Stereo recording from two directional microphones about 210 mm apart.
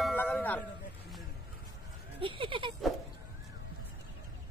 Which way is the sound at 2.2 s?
25° right (ahead or behind).